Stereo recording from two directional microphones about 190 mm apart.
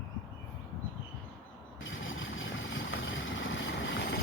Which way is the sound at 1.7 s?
90° left.